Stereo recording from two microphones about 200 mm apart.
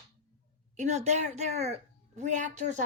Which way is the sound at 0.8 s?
35° right (ahead or behind).